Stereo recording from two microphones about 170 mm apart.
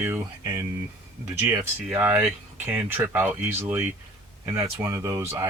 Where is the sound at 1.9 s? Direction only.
10° right (ahead or behind).